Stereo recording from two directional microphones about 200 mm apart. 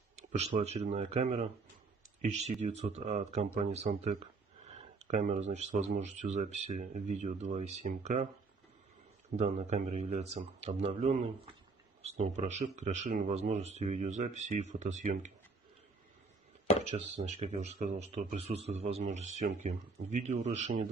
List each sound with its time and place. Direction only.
0.3 s speech: 35° right (ahead or behind)
2.6 s speech: 35° right (ahead or behind)
9.4 s speech: 35° right (ahead or behind)
16.8 s speech: 35° right (ahead or behind)